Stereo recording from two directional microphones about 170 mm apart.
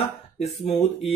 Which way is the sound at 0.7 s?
Centre (ahead or behind).